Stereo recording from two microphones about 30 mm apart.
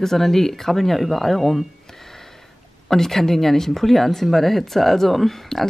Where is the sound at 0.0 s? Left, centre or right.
Centre.